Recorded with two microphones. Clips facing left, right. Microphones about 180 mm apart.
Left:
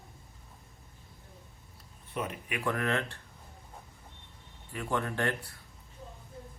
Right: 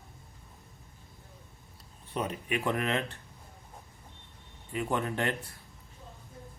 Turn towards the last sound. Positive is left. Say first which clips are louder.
# right 1 dB
turn(degrees=-20)  # may be behind; listen again after turning